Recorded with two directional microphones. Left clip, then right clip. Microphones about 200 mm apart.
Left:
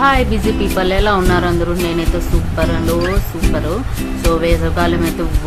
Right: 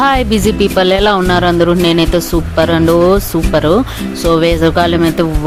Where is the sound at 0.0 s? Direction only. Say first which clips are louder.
Right 2 dB; 50° right (ahead or behind).